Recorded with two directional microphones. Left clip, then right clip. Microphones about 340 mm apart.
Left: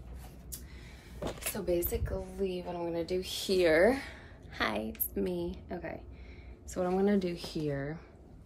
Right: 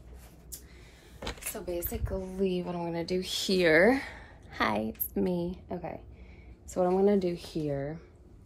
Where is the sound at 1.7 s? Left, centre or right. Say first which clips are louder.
Left 3 dB; centre.